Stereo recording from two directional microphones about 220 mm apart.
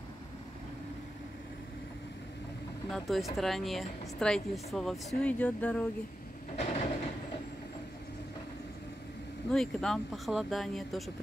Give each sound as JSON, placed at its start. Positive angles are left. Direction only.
{"t": 2.9, "sound": "speech", "side_deg": 0}
{"t": 6.5, "sound": "a sound", "side_deg": 30}
{"t": 9.5, "sound": "speech", "side_deg": 0}